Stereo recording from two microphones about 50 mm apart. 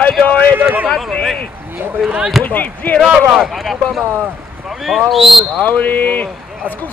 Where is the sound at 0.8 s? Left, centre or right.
Centre.